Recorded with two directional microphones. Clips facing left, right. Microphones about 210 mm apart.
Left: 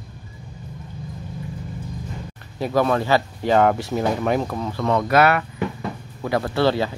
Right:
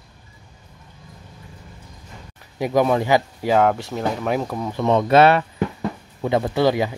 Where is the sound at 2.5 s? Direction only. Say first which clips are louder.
Right 2 dB; 15° right (ahead or behind).